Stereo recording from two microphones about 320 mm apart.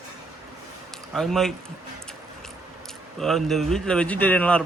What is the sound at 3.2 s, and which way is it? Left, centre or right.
Speech, centre.